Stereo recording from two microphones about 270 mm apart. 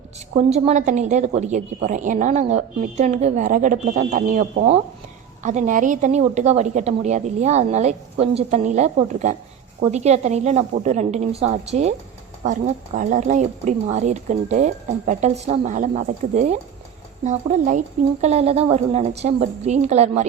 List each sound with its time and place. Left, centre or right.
0.3 s a woman's voice: right